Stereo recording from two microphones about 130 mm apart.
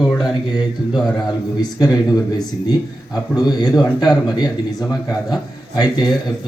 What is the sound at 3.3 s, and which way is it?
Speech, 30° left (ahead or behind).